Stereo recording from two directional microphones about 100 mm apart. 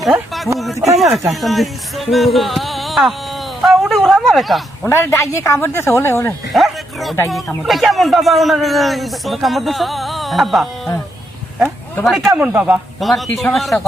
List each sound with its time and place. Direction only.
0.0 s speech: centre (ahead or behind)
3.6 s a sound: centre (ahead or behind)
4.9 s speech: 25° left (ahead or behind)
6.5 s bow-wow: centre (ahead or behind)
7.3 s speech: centre (ahead or behind)
12.0 s speech: centre (ahead or behind)
12.4 s a man's voice: 15° right (ahead or behind)
13.0 s speech: centre (ahead or behind)